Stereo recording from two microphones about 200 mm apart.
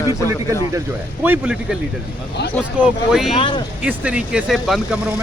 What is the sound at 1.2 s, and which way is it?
Speech, 5° right (ahead or behind).